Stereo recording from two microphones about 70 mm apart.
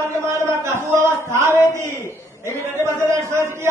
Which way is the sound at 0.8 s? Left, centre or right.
Right.